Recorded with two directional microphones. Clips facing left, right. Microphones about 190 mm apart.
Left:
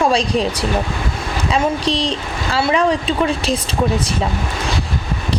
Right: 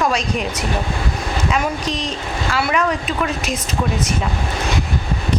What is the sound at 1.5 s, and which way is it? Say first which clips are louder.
A woman's voice: left 6 dB; 30° left (ahead or behind).